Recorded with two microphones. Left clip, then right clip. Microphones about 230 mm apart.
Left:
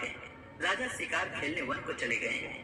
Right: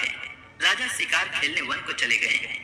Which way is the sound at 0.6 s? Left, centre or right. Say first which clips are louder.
Right 9 dB; right.